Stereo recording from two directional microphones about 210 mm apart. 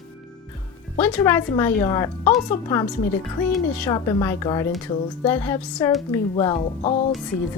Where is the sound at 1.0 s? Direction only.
10° left (ahead or behind).